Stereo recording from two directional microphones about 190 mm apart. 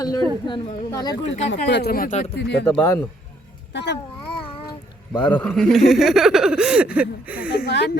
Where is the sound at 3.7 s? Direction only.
65° left (ahead or behind).